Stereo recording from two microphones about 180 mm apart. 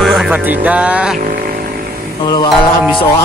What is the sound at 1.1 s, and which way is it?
Vehicle, 50° right (ahead or behind).